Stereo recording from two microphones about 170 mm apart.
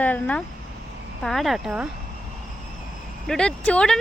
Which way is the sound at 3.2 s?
5° left (ahead or behind).